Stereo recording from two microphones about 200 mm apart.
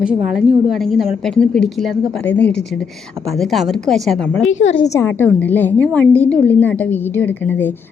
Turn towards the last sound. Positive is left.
turn(degrees=10)  # may be behind; listen again after turning